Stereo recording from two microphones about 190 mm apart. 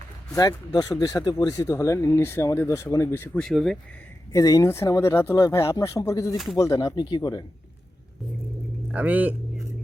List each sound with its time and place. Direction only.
0.3 s speech: 20° left (ahead or behind); by 3.8 s centre (ahead or behind)
4.3 s speech: 15° left (ahead or behind)
6.3 s speech: centre (ahead or behind)
6.6 s speech: 15° left (ahead or behind)
8.9 s speech: 10° right (ahead or behind)